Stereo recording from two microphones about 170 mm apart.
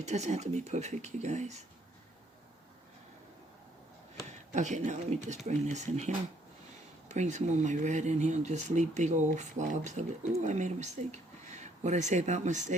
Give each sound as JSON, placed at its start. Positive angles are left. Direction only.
{"t": 0.0, "sound": "speech", "side_deg": -40}
{"t": 4.3, "sound": "speech", "side_deg": -45}